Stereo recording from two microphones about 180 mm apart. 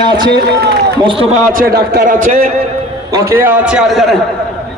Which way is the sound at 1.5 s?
55° right (ahead or behind).